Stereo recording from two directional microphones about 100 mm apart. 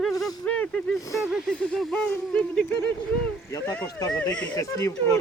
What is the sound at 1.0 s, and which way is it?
Speech, 35° left (ahead or behind).